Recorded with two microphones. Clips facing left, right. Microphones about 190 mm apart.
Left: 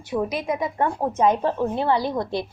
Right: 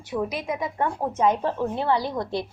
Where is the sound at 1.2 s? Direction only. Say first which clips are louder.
Left 2 dB; 20° left (ahead or behind).